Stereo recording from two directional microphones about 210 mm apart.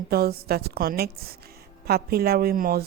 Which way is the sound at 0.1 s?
45° right (ahead or behind).